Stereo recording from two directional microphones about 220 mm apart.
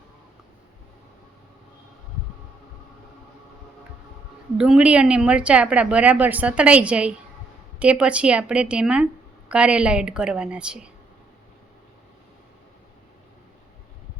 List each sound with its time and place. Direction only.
4.5 s a woman's voice: 5° right (ahead or behind)